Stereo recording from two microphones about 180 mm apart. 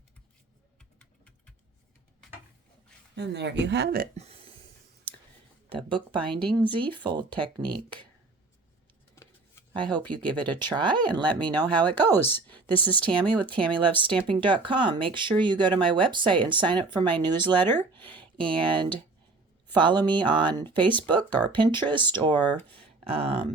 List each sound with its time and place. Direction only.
3.2 s speech: 70° right (ahead or behind)
4.2 s a sound: 35° right (ahead or behind)
5.6 s speech: 30° right (ahead or behind)
9.1 s a sound: 10° left (ahead or behind)
10.2 s speech: 10° left (ahead or behind)
10.7 s speech: 25° right (ahead or behind)
11.5 s speech: 10° left (ahead or behind)
13.7 s speech: 25° right (ahead or behind)
17.5 s speech: 10° left (ahead or behind)
18.1 s a sound: 5° left (ahead or behind)
18.6 s speech: 25° right (ahead or behind)
22.4 s speech: 10° left (ahead or behind)
22.7 s speech: 30° right (ahead or behind)